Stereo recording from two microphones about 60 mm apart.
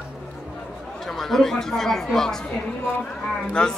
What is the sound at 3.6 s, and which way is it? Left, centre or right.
Speech, centre.